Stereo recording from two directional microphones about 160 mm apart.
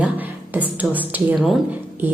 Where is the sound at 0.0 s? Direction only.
10° right (ahead or behind).